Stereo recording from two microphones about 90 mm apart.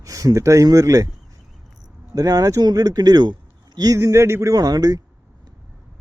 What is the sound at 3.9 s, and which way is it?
Speech, 30° right (ahead or behind).